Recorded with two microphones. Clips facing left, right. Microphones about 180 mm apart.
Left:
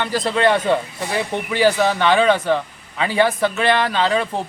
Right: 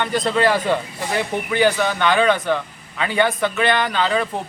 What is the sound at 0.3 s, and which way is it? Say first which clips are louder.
Speech: left 2 dB; centre (ahead or behind).